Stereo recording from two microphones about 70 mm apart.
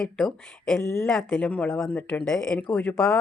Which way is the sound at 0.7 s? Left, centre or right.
Left.